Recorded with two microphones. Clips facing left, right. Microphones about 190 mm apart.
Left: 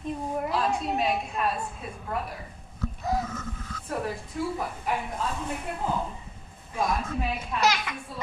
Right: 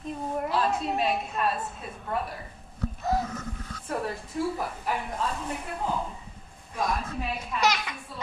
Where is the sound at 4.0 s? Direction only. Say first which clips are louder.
Right 1 dB; centre (ahead or behind).